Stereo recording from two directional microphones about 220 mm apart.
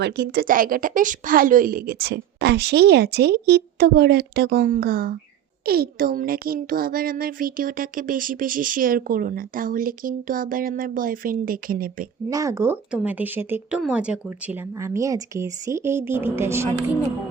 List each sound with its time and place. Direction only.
0.0 s a woman's voice: 45° right (ahead or behind)
12.3 s speech: 15° right (ahead or behind)